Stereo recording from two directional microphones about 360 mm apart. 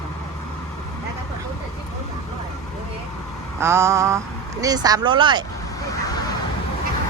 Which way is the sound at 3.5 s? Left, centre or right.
Centre.